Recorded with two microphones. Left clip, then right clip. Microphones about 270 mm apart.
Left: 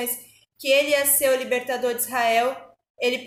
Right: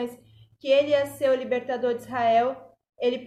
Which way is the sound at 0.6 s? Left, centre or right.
Centre.